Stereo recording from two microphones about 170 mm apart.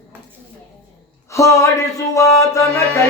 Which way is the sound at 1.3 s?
20° left (ahead or behind).